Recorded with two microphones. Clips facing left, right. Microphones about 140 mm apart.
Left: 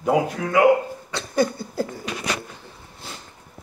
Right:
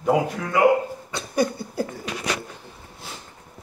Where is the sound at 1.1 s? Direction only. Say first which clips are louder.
Left 1 dB; 15° right (ahead or behind).